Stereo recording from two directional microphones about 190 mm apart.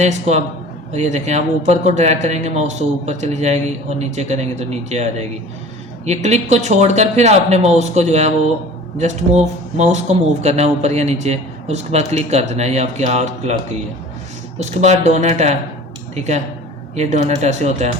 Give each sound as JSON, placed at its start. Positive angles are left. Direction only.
{"t": 0.0, "sound": "speech", "side_deg": -35}
{"t": 14.6, "sound": "speech", "side_deg": -35}